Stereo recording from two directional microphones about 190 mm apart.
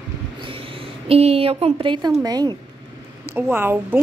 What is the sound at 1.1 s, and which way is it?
A woman's voice, 30° right (ahead or behind).